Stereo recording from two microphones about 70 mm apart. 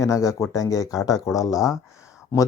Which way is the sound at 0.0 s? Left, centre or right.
Left.